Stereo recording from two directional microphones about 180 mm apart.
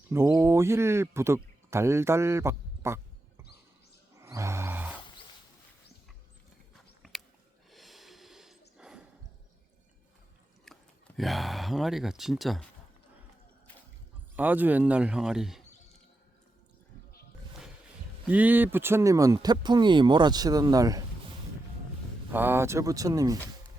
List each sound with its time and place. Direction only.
0.1 s speech: 15° right (ahead or behind)
4.1 s music: 15° right (ahead or behind)
7.0 s a sound: centre (ahead or behind)
7.7 s snort: centre (ahead or behind)
8.8 s a sound: 5° right (ahead or behind)
10.7 s a sound: 5° left (ahead or behind)
11.2 s speech: centre (ahead or behind)
14.3 s speech: 10° right (ahead or behind)
18.3 s speech: 10° right (ahead or behind)
22.3 s speech: 10° right (ahead or behind)